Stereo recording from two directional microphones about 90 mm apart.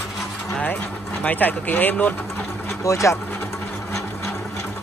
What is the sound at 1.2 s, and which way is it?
Speech, 20° left (ahead or behind).